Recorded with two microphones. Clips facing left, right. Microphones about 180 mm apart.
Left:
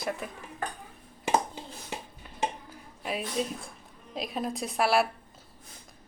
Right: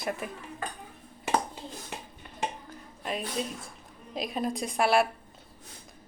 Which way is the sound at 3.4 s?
Centre (ahead or behind).